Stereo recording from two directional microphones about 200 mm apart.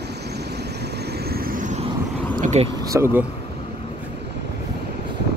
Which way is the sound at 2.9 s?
10° right (ahead or behind).